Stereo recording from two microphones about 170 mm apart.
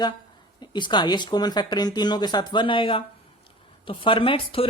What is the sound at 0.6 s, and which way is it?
Speech, 25° left (ahead or behind).